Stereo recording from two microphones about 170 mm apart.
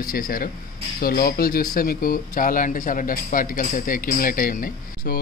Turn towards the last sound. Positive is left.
turn(degrees=55)  # may be behind; listen again after turning